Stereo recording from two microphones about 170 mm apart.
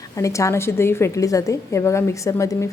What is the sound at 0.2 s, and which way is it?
A woman's voice, 20° left (ahead or behind).